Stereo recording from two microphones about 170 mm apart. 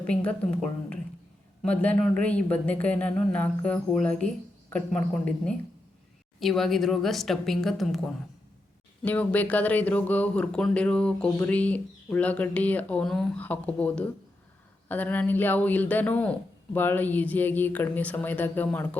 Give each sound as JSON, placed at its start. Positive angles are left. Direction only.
{"t": 0.1, "sound": "speech", "side_deg": 5}
{"t": 9.0, "sound": "speech", "side_deg": 10}